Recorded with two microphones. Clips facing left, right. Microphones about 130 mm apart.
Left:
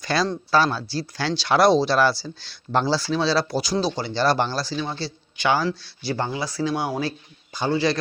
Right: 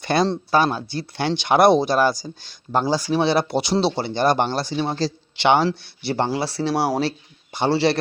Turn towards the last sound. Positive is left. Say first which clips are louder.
# right 3 dB
turn(degrees=-30)  # may be behind; listen again after turning